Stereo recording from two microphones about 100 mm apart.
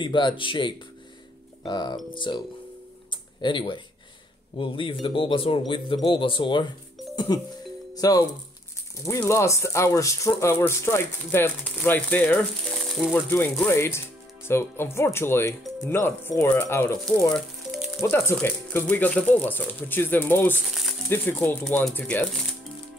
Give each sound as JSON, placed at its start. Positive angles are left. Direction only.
{"t": 0.0, "sound": "speech", "side_deg": 55}
{"t": 3.1, "sound": "a sound", "side_deg": 50}
{"t": 4.6, "sound": "speech", "side_deg": 60}
{"t": 7.9, "sound": "speech", "side_deg": 35}
{"t": 9.2, "sound": "speech", "side_deg": 30}
{"t": 12.7, "sound": "music", "side_deg": 0}
{"t": 13.1, "sound": "speech", "side_deg": 15}
{"t": 17.3, "sound": "frying", "side_deg": 0}
{"t": 18.1, "sound": "speech", "side_deg": 20}
{"t": 20.6, "sound": "crumpling", "side_deg": 0}
{"t": 21.1, "sound": "speech", "side_deg": 20}